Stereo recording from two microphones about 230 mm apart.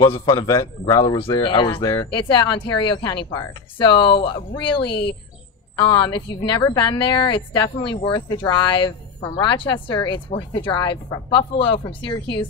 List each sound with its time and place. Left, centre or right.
0.0 s a woman's voice: left